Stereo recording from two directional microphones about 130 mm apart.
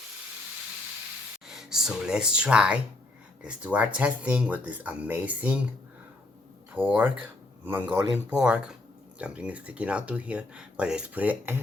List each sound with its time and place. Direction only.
1.5 s speech: 5° right (ahead or behind)
6.7 s speech: 15° right (ahead or behind)